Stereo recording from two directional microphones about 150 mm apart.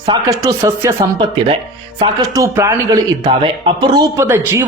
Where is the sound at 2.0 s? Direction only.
20° right (ahead or behind).